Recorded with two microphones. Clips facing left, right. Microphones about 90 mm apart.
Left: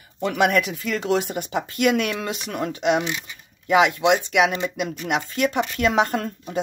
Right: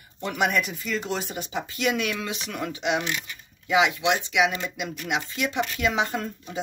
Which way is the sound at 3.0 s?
15° left (ahead or behind).